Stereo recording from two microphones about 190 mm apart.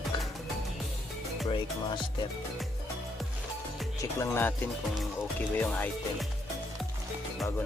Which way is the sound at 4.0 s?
15° left (ahead or behind).